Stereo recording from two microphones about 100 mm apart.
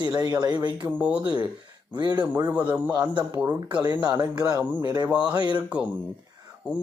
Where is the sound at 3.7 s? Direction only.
45° right (ahead or behind).